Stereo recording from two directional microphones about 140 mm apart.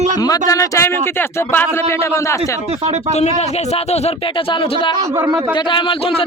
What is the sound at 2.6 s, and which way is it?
Speech, 50° right (ahead or behind).